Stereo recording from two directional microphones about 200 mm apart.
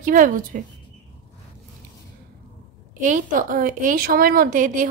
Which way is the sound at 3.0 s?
40° right (ahead or behind).